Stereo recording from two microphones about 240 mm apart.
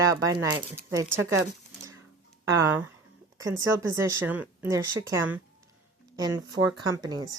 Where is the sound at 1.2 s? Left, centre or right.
Centre.